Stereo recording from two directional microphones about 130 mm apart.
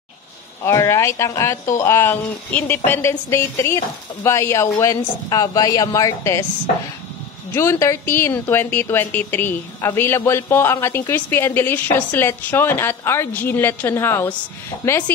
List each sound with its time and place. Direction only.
0.7 s speech: 20° left (ahead or behind)
7.5 s a woman's voice: 20° left (ahead or behind)